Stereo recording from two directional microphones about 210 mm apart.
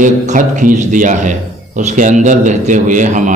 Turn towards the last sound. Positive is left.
turn(degrees=-35)  # may be behind; listen again after turning